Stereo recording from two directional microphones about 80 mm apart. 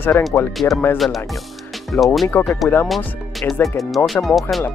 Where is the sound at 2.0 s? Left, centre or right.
Centre.